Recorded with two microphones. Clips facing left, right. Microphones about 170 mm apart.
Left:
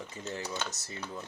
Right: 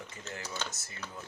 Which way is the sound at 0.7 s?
30° left (ahead or behind).